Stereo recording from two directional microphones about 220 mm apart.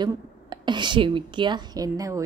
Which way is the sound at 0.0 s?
20° right (ahead or behind).